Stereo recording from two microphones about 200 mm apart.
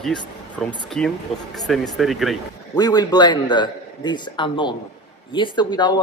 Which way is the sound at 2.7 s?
20° left (ahead or behind).